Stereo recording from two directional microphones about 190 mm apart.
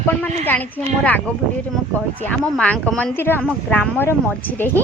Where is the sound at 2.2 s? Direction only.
5° left (ahead or behind).